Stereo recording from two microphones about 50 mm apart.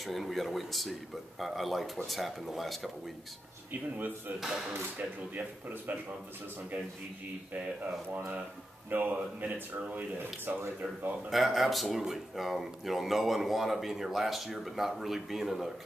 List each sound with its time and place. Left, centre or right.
0.0 s speech: centre
4.9 s speech: right
7.5 s speech: right
11.2 s speech: centre